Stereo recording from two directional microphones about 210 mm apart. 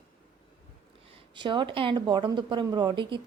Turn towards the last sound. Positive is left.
turn(degrees=-20)  # may be behind; listen again after turning